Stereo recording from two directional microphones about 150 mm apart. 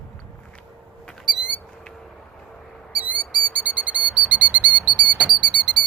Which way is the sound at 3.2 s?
10° right (ahead or behind).